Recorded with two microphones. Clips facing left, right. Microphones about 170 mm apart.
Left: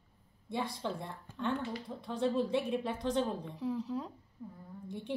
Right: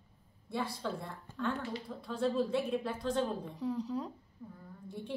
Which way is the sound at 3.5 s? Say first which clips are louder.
Even; centre (ahead or behind).